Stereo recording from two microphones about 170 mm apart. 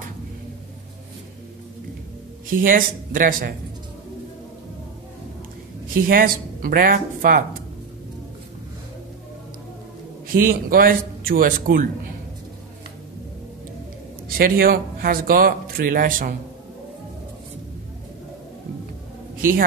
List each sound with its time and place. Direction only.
2.4 s speech: 55° right (ahead or behind)
5.9 s speech: 55° right (ahead or behind)
10.2 s speech: 55° right (ahead or behind)
14.4 s speech: 60° right (ahead or behind)